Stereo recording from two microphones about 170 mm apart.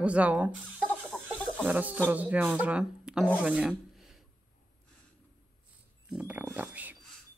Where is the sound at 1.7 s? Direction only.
10° right (ahead or behind).